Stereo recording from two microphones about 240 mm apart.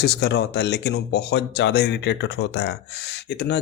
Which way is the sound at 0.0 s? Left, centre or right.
Left.